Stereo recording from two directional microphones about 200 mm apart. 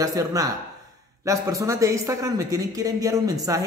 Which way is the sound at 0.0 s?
15° right (ahead or behind).